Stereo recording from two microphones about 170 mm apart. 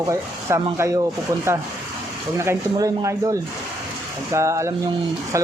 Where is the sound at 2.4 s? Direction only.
20° right (ahead or behind).